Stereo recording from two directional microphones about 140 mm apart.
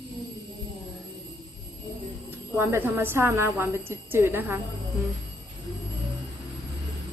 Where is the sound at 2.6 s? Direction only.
15° right (ahead or behind).